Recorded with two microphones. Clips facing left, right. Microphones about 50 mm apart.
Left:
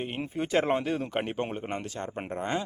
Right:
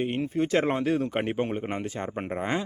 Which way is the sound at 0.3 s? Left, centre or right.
Centre.